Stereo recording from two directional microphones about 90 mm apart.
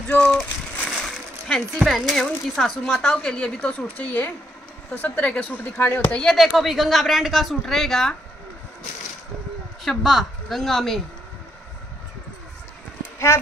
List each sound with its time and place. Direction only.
0.1 s a sound: 10° left (ahead or behind)
0.8 s speech: 5° left (ahead or behind)
3.2 s a woman's voice: 15° left (ahead or behind)
5.8 s speech: 25° left (ahead or behind)
6.1 s a woman's voice: centre (ahead or behind)
9.8 s a woman's voice: centre (ahead or behind)